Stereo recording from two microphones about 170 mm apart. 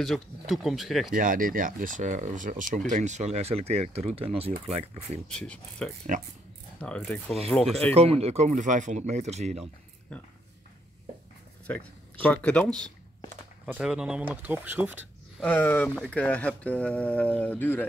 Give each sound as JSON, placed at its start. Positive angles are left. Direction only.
{"t": 0.0, "sound": "speech", "side_deg": 0}
{"t": 1.1, "sound": "speech", "side_deg": -55}
{"t": 5.3, "sound": "speech", "side_deg": 5}
{"t": 6.1, "sound": "speech", "side_deg": -45}
{"t": 6.8, "sound": "speech", "side_deg": 5}
{"t": 7.9, "sound": "speech", "side_deg": -35}
{"t": 9.6, "sound": "a sound", "side_deg": 10}
{"t": 11.6, "sound": "speech", "side_deg": 10}
{"t": 13.7, "sound": "speech", "side_deg": -5}
{"t": 15.4, "sound": "speech", "side_deg": 10}